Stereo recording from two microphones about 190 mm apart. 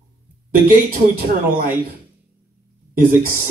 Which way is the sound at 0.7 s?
50° right (ahead or behind).